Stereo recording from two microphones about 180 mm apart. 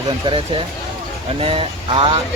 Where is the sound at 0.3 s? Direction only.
25° right (ahead or behind).